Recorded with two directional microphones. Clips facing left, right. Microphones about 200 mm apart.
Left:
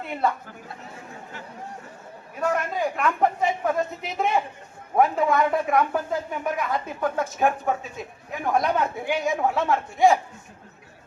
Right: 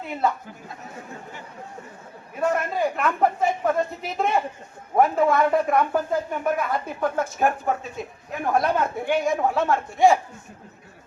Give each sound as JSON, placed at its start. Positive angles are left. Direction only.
{"t": 0.0, "sound": "a man's voice", "side_deg": 0}
{"t": 2.4, "sound": "a sound", "side_deg": 0}
{"t": 4.9, "sound": "speech", "side_deg": 0}